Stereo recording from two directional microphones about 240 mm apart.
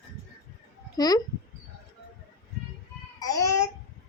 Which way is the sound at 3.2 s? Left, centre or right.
Centre.